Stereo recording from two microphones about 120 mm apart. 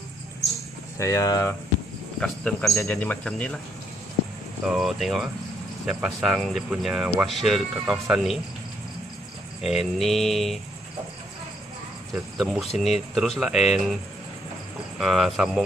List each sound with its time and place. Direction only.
0.9 s speech: 25° left (ahead or behind)
2.1 s speech: 5° left (ahead or behind)
2.8 s speech: 20° left (ahead or behind)
4.6 s speech: 5° right (ahead or behind)
9.6 s speech: centre (ahead or behind)
12.4 s speech: centre (ahead or behind)
15.0 s speech: 5° right (ahead or behind)